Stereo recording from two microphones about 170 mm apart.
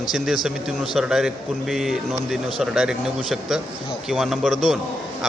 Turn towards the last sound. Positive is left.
turn(degrees=0)  # may be behind; listen again after turning